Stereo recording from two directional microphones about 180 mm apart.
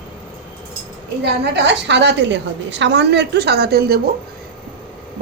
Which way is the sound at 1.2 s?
70° right (ahead or behind).